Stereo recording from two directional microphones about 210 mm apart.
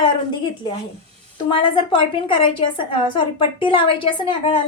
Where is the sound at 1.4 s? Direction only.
25° left (ahead or behind).